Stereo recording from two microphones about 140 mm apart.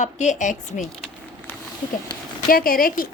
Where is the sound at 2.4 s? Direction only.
90° left.